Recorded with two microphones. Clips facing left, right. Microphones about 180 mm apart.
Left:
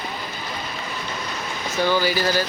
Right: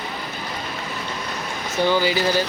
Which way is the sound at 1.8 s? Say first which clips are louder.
Right 1 dB; 20° right (ahead or behind).